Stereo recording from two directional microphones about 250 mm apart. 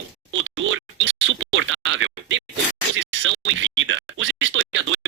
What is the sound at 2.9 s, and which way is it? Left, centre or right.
Speech, right.